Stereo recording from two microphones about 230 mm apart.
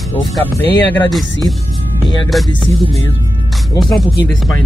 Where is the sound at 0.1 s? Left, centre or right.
Centre.